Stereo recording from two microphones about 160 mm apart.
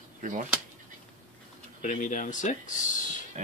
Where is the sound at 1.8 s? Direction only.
50° left (ahead or behind).